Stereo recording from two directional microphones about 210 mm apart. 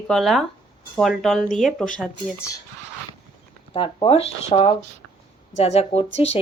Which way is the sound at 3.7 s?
25° left (ahead or behind).